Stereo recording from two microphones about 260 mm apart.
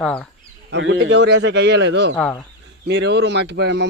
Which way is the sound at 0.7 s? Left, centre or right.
Right.